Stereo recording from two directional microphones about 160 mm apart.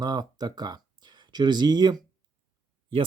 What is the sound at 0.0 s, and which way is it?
Speech, 25° right (ahead or behind).